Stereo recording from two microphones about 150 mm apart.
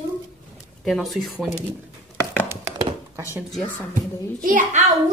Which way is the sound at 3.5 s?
10° left (ahead or behind).